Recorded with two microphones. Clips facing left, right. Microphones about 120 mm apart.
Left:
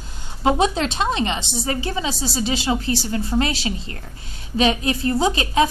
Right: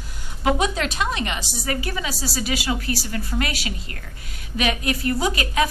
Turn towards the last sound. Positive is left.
turn(degrees=25)  # may be behind; listen again after turning